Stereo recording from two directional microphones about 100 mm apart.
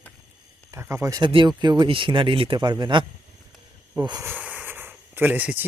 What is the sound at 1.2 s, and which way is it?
Speech, 55° right (ahead or behind).